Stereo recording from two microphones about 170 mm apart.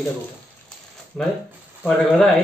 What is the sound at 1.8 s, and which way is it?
Speech, centre (ahead or behind).